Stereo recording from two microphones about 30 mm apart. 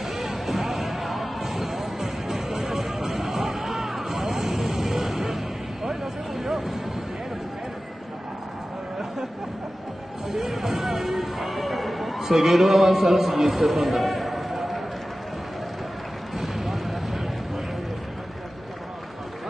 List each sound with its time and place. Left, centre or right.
0.0 s music: centre
0.7 s music: centre
4.1 s vehicle: centre
6.3 s vehicle: centre
10.4 s music: centre
10.8 s a sound: centre
12.2 s a man's voice: centre
13.7 s a sound: centre
16.5 s vehicle: centre